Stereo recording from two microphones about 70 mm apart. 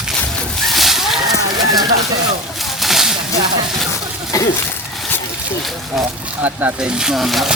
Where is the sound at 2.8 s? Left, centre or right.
Centre.